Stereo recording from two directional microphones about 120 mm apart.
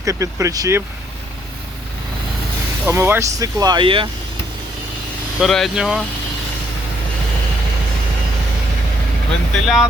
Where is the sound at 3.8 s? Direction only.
45° right (ahead or behind).